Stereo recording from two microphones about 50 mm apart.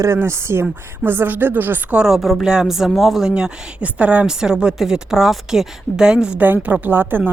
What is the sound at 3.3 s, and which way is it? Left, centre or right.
Speech, right.